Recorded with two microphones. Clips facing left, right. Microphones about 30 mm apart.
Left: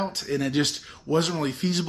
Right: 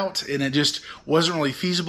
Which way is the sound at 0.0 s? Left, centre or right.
Right.